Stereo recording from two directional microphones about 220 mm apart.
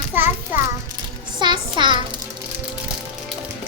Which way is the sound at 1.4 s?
20° right (ahead or behind).